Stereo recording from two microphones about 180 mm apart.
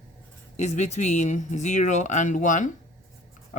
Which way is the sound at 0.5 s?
40° left (ahead or behind).